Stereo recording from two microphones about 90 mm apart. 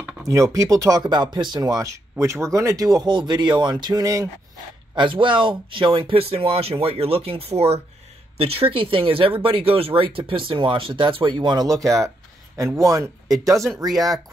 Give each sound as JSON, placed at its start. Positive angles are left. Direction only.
{"t": 0.2, "sound": "speech", "side_deg": -35}
{"t": 4.9, "sound": "speech", "side_deg": -65}